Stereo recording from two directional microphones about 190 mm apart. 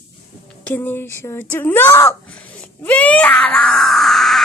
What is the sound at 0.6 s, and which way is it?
A woman's voice, 10° left (ahead or behind).